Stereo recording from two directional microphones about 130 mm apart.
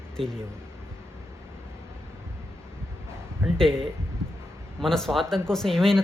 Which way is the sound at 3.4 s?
15° right (ahead or behind).